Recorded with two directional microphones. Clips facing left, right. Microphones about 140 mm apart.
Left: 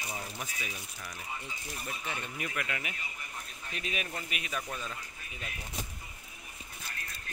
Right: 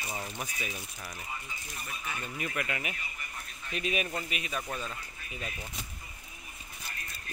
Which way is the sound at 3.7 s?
15° right (ahead or behind).